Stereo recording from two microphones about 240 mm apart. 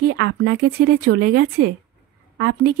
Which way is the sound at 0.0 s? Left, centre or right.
Right.